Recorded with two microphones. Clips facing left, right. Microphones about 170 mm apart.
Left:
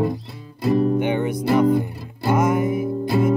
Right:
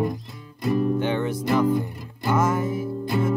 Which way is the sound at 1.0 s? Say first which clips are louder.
Left 3 dB; 15° left (ahead or behind).